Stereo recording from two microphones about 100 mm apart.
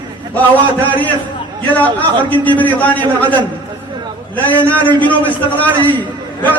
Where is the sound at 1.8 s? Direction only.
15° left (ahead or behind).